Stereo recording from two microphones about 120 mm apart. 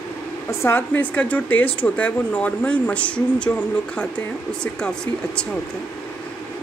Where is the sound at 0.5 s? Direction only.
20° left (ahead or behind).